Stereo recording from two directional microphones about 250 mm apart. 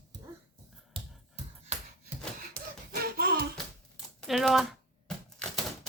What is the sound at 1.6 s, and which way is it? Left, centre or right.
Music, right.